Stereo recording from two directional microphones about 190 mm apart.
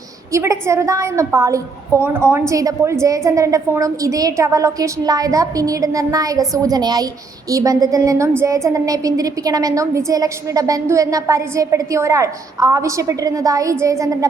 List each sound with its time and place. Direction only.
0.3 s a woman's voice: 15° right (ahead or behind)